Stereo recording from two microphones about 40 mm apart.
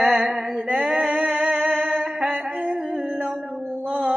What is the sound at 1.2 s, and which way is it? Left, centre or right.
Music, right.